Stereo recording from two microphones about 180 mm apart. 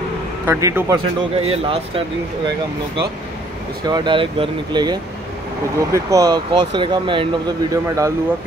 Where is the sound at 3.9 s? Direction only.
25° right (ahead or behind).